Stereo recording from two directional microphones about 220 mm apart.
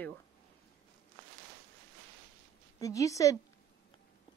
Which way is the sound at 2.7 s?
15° left (ahead or behind).